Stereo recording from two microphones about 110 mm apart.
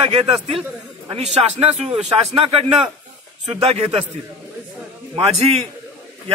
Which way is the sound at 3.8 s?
75° right (ahead or behind).